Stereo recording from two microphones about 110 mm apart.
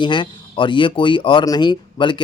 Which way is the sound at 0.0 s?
50° left (ahead or behind).